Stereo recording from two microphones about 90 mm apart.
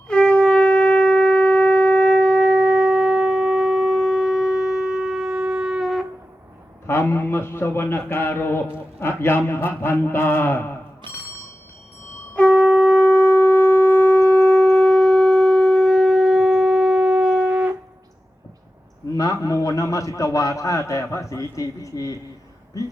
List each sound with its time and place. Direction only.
0.1 s shofar: 10° left (ahead or behind)
6.8 s a man's voice: 30° left (ahead or behind)
12.3 s shofar: 15° left (ahead or behind); by 17.7 s 15° right (ahead or behind)
19.1 s a man's voice: 40° left (ahead or behind)